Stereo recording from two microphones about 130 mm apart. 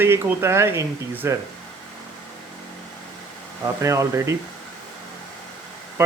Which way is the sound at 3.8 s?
25° right (ahead or behind).